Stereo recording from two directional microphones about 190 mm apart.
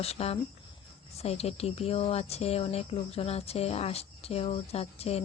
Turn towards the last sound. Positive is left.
turn(degrees=35)  # may be behind; listen again after turning